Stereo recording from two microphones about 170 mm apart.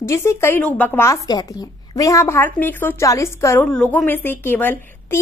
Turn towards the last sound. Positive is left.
turn(degrees=10)  # may be behind; listen again after turning